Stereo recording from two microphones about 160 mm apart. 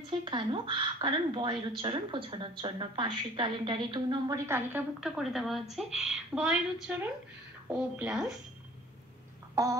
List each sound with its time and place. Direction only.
0.2 s speech: 30° right (ahead or behind)
4.5 s a woman's voice: 10° right (ahead or behind)
9.6 s a sound: 20° right (ahead or behind)